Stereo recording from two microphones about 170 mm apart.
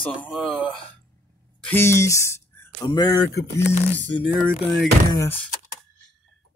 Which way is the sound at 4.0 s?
90° left.